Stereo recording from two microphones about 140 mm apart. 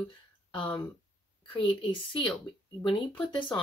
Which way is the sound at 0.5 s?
35° left (ahead or behind).